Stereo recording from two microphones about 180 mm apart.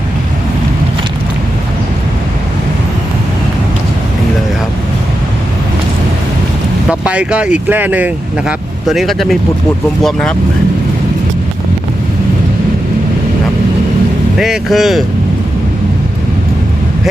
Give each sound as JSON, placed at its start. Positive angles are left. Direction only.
{"t": 7.0, "sound": "speech", "side_deg": -5}
{"t": 14.3, "sound": "speech", "side_deg": 0}